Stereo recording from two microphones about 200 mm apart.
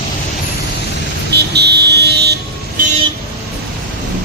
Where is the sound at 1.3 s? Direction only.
55° right (ahead or behind).